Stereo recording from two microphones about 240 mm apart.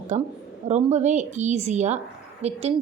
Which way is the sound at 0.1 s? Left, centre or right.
Right.